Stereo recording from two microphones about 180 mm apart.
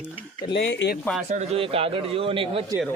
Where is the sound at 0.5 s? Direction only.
90° left.